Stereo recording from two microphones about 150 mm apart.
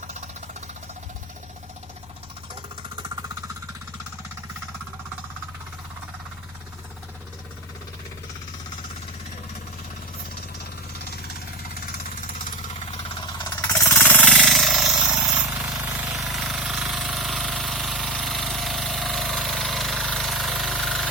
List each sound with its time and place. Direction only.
13.4 s jackhammer: 25° left (ahead or behind)
13.8 s jackhammer: 15° left (ahead or behind)
14.3 s jackhammer: centre (ahead or behind)